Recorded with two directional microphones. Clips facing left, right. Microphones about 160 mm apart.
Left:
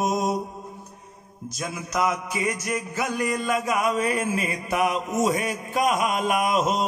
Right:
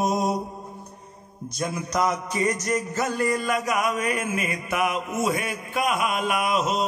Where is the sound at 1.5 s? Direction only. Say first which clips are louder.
Right 2 dB; centre (ahead or behind); by 6.8 s 45° left (ahead or behind).